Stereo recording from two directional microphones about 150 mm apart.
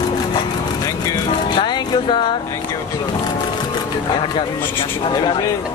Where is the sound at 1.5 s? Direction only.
30° left (ahead or behind).